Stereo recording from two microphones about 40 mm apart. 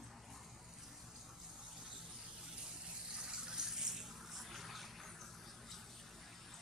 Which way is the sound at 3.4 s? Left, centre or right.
Centre.